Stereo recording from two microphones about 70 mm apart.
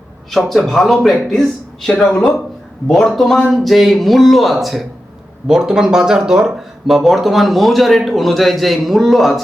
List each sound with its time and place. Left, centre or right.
0.3 s a man's voice: centre